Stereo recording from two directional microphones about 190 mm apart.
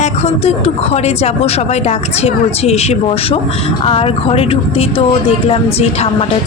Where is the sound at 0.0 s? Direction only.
35° left (ahead or behind).